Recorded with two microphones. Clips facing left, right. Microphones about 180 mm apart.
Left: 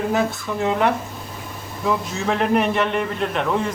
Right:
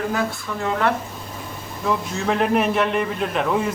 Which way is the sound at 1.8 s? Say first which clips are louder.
Left 1 dB; centre (ahead or behind).